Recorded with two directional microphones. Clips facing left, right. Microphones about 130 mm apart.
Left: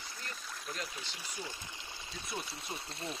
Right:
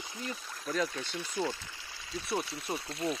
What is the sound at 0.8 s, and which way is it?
Speech, 90° right.